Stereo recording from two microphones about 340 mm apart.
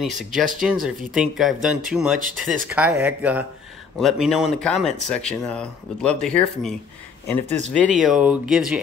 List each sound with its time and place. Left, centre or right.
0.0 s speech: centre
2.1 s speech: right
2.7 s speech: centre
7.4 s speech: centre
8.0 s speech: centre